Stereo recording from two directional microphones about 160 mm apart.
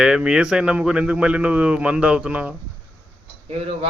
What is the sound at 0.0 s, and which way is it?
A man's voice, 5° right (ahead or behind).